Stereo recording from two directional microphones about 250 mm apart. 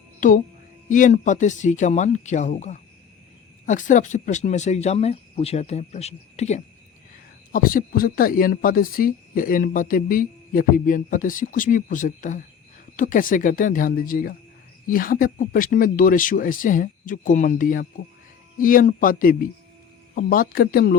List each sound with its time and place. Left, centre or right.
0.2 s music: left
0.9 s speech: left